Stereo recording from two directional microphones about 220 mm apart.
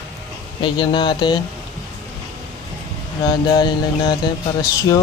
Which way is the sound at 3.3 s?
20° left (ahead or behind).